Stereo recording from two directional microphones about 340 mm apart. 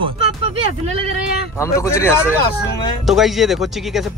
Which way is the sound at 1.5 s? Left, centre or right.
Centre.